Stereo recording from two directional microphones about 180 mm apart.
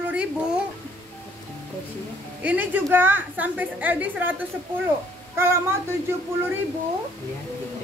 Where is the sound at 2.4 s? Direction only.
10° right (ahead or behind).